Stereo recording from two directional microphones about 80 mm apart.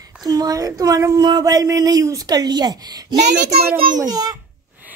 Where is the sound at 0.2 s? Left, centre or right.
Right.